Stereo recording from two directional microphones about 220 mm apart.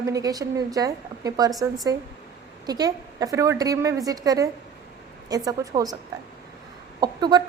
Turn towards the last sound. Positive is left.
turn(degrees=-20)  # may be behind; listen again after turning